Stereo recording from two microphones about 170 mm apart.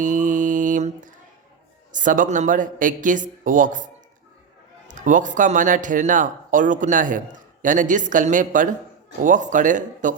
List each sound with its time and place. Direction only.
0.0 s mantra: 50° right (ahead or behind)
1.9 s speech: 50° right (ahead or behind)
4.9 s speech: 50° right (ahead or behind)